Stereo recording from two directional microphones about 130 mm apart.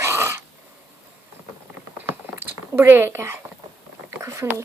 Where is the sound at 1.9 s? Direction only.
15° right (ahead or behind).